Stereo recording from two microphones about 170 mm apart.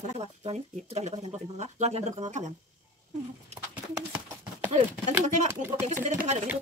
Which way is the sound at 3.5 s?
10° right (ahead or behind).